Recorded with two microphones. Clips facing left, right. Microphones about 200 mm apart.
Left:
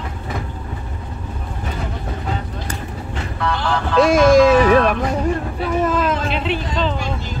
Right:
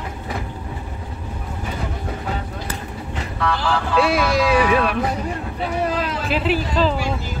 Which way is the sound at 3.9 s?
45° left (ahead or behind).